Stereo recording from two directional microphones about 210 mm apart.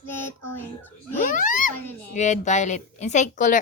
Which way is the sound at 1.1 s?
40° left (ahead or behind).